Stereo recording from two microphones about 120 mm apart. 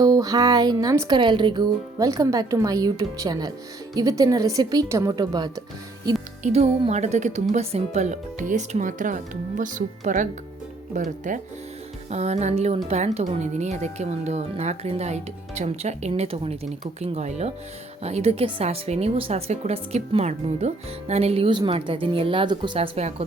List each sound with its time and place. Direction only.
0.0 s speech: 30° right (ahead or behind)
2.0 s speech: 25° right (ahead or behind)
6.4 s speech: 60° right (ahead or behind); by 7.4 s 75° right (ahead or behind)
7.5 s speech: 65° right (ahead or behind); by 11.3 s 90° right
12.1 s speech: 70° right (ahead or behind)
16.6 s speech: 70° right (ahead or behind); by 22.9 s 40° right (ahead or behind)
23.0 s speech: 65° right (ahead or behind)